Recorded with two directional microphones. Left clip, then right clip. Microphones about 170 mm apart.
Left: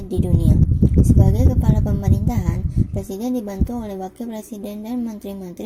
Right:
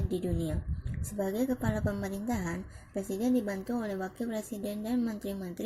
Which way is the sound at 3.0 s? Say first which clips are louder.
Left 3 dB; 20° left (ahead or behind).